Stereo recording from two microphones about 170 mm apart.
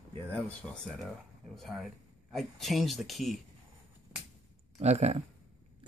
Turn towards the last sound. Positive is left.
turn(degrees=-40)  # may be behind; listen again after turning